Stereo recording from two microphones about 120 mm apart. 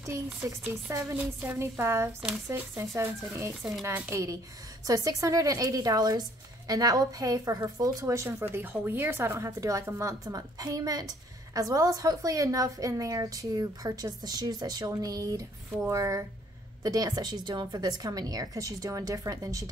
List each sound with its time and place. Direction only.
0.0 s a woman's voice: 20° right (ahead or behind)
1.1 s a woman's voice: 15° right (ahead or behind)